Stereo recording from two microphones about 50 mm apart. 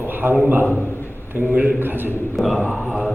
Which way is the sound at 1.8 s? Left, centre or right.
Right.